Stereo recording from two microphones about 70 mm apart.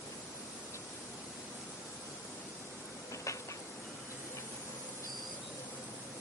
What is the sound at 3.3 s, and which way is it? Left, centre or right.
Train, left.